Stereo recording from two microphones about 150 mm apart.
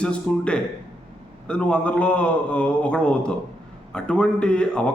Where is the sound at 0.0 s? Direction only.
5° left (ahead or behind).